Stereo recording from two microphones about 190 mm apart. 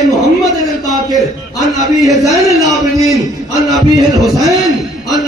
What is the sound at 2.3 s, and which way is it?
Speech, 15° right (ahead or behind).